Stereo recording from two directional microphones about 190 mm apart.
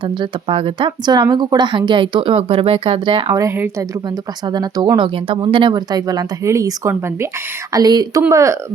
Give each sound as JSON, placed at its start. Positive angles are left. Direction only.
{"t": 0.0, "sound": "speech", "side_deg": -25}
{"t": 3.4, "sound": "speech", "side_deg": -15}